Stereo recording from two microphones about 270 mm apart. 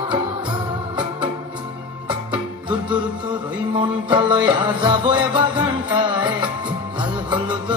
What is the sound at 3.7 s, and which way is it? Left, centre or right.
Music, centre.